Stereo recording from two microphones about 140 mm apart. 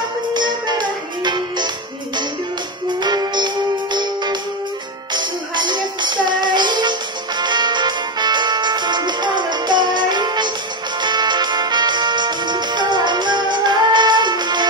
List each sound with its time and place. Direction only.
0.3 s music: 30° right (ahead or behind)
3.0 s music: 30° right (ahead or behind)